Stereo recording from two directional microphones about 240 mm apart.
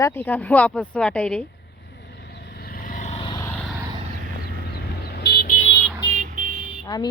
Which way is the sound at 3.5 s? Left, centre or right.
Centre.